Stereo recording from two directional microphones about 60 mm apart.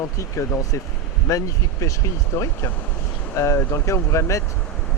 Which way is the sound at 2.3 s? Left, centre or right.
Left.